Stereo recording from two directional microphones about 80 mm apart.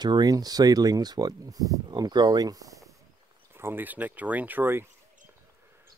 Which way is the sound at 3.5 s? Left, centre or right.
Right.